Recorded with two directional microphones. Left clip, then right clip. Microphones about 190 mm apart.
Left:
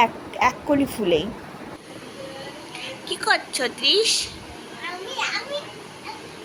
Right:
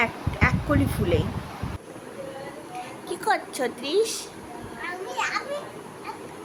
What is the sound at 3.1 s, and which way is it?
A woman's voice, 10° right (ahead or behind).